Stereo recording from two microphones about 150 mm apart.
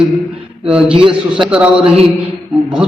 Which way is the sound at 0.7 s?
5° right (ahead or behind).